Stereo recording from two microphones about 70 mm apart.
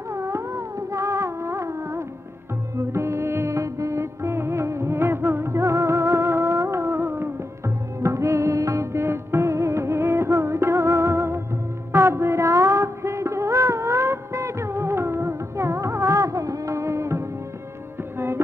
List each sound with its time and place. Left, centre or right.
0.1 s music: right
11.9 s a sound: right
18.1 s music: right